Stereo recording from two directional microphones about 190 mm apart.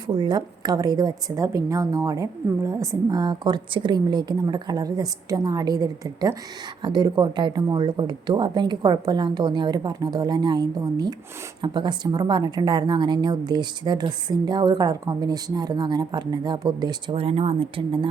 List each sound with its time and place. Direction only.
0.2 s speech: 20° right (ahead or behind)